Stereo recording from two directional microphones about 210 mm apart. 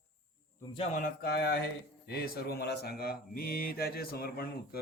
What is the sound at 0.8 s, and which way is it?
Speech, 40° left (ahead or behind).